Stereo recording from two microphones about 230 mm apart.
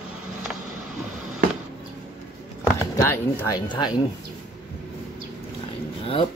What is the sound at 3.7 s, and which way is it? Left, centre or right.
Speech, centre.